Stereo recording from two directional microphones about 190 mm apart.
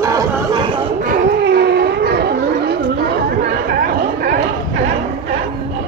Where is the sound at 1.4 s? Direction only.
60° right (ahead or behind).